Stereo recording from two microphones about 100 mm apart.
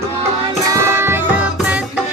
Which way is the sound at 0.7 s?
25° right (ahead or behind).